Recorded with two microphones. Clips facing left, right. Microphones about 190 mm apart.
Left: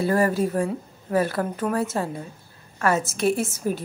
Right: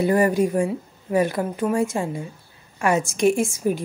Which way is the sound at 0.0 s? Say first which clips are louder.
Right 3 dB; 15° right (ahead or behind).